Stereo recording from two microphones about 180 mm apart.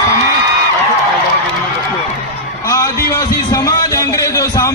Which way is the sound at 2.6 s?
15° left (ahead or behind).